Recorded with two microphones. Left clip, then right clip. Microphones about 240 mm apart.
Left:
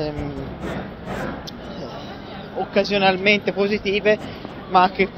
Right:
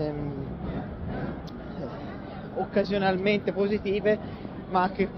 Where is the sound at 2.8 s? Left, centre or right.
Centre.